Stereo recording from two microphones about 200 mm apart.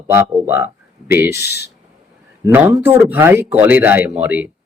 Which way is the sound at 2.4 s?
10° right (ahead or behind).